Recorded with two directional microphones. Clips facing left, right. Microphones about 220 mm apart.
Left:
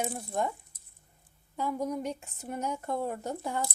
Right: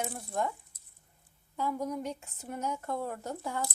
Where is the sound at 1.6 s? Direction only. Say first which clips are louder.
Left 2 dB; 15° left (ahead or behind).